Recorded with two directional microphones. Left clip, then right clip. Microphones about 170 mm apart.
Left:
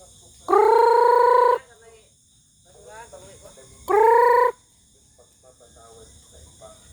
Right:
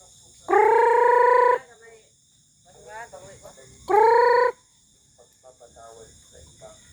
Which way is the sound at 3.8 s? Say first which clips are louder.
Left 1 dB; 40° left (ahead or behind).